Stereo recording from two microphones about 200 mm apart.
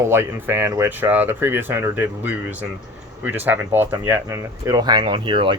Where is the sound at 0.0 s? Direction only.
10° right (ahead or behind).